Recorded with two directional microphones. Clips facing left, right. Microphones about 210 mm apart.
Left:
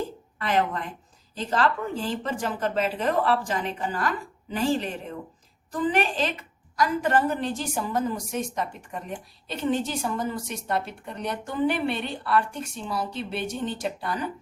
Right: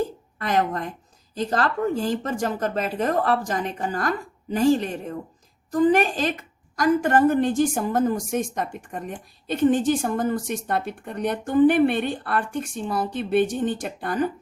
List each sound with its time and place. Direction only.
0.3 s a woman's voice: 45° right (ahead or behind)